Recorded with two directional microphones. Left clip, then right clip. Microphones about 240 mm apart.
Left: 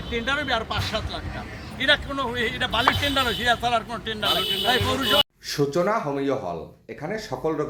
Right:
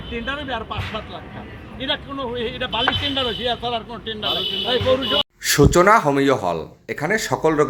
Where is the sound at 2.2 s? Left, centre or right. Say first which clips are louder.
Even; centre.